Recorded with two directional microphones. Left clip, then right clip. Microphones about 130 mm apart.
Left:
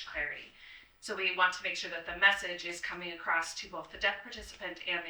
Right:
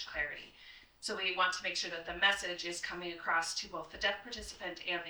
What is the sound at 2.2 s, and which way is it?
Speech, 25° right (ahead or behind).